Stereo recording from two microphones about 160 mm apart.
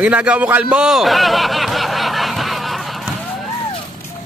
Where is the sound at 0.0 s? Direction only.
5° right (ahead or behind).